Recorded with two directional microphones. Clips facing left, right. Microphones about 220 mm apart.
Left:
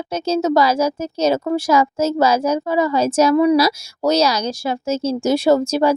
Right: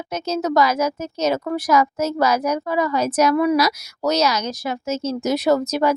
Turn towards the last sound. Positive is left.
turn(degrees=30)  # may be behind; listen again after turning